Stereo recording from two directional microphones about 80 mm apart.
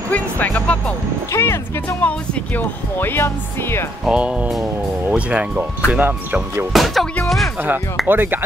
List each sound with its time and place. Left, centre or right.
0.1 s music: centre
1.3 s speech: left
4.0 s speech: centre
6.7 s speech: centre
7.2 s music: centre
8.1 s speech: right